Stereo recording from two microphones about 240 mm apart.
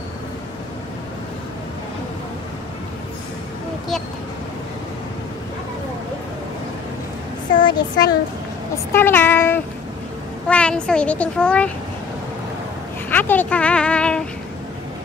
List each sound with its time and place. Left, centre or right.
7.6 s a child's voice: centre
13.1 s speech: centre